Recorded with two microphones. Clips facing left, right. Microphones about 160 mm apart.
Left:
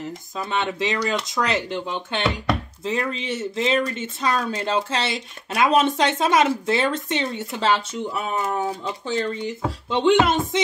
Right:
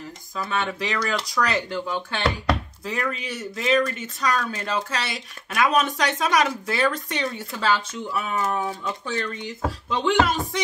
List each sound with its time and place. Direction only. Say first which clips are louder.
0.4 s speech: left 2 dB; 20° left (ahead or behind)